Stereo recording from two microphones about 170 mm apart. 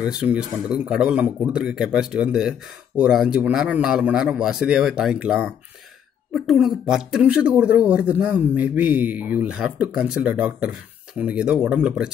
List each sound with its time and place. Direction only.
0.0 s a man's voice: 5° right (ahead or behind)